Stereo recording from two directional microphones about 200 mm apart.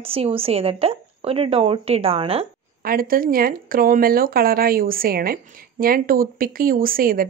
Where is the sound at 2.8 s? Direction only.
45° right (ahead or behind).